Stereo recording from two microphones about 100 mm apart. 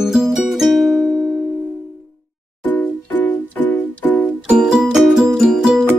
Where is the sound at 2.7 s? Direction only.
15° left (ahead or behind).